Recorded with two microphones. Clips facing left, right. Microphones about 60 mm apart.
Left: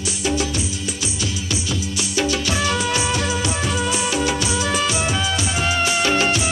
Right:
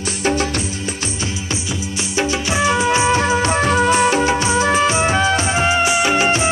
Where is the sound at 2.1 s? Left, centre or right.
Right.